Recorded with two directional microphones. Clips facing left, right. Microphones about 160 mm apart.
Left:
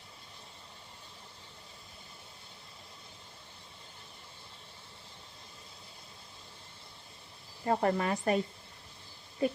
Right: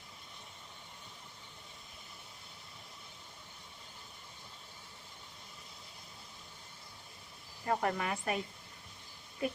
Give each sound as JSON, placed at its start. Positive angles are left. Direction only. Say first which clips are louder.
{"t": 7.6, "sound": "speech", "louder": "left 4 dB", "side_deg": 30}
{"t": 9.4, "sound": "speech", "louder": "left 5 dB", "side_deg": 30}